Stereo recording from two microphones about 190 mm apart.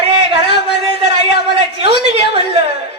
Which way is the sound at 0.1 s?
30° right (ahead or behind).